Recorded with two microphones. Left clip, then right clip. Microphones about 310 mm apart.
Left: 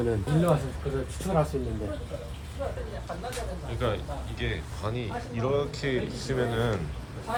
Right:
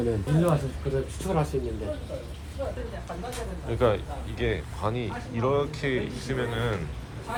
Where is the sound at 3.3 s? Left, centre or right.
Centre.